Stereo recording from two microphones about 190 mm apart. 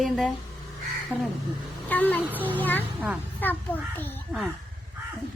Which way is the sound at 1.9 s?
10° left (ahead or behind).